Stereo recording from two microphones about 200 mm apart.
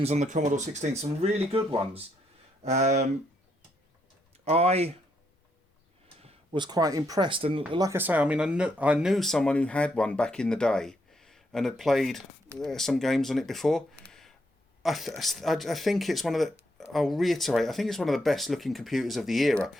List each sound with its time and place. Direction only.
0.0 s speech: 35° right (ahead or behind)
4.4 s speech: 30° right (ahead or behind)
6.2 s speech: 25° right (ahead or behind); by 19.7 s centre (ahead or behind)